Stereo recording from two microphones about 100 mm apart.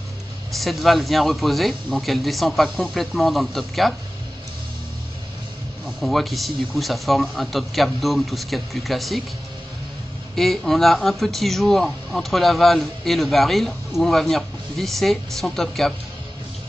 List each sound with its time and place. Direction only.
0.5 s speech: centre (ahead or behind)
5.9 s speech: centre (ahead or behind)
10.3 s speech: centre (ahead or behind)